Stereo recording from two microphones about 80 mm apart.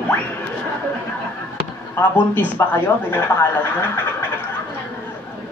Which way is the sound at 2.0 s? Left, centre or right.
Left.